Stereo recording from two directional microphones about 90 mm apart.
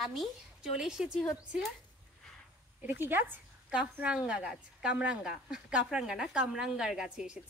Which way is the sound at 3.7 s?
10° right (ahead or behind).